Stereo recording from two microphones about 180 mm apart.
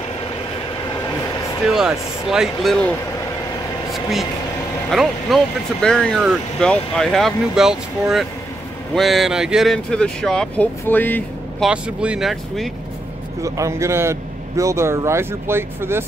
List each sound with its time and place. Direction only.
1.7 s speech: 5° right (ahead or behind)
3.9 s vehicle: centre (ahead or behind)
4.9 s speech: centre (ahead or behind)
11.6 s speech: 5° right (ahead or behind)
13.4 s speech: 15° right (ahead or behind)